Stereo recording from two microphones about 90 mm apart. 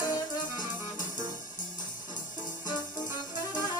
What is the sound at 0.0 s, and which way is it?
Music, 45° left (ahead or behind).